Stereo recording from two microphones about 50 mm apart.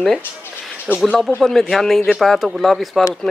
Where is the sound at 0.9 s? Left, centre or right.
Left.